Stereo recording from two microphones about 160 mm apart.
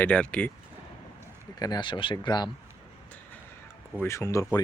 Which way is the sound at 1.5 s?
25° left (ahead or behind).